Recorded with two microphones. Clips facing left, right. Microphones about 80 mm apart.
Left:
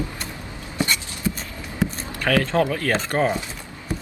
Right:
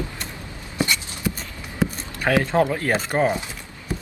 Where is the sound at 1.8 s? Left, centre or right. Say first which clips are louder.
Right 1 dB; centre.